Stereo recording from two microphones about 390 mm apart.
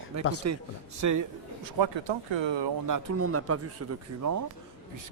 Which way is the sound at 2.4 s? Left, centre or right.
Right.